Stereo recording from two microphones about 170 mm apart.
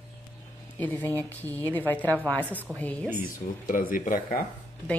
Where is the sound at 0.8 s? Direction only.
10° left (ahead or behind).